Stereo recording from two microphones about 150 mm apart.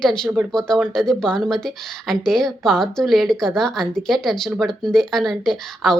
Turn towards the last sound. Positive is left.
turn(degrees=0)  # may be behind; listen again after turning